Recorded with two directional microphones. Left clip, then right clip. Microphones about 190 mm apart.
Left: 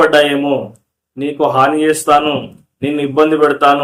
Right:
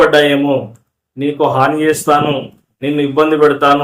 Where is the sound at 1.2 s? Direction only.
10° left (ahead or behind).